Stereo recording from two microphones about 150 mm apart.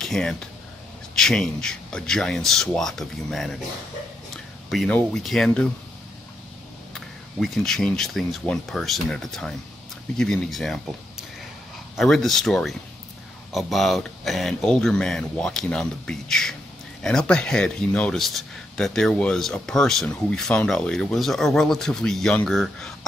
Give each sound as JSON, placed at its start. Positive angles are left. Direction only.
{"t": 0.0, "sound": "speech", "side_deg": 5}
{"t": 4.6, "sound": "speech", "side_deg": 5}
{"t": 6.9, "sound": "speech", "side_deg": 0}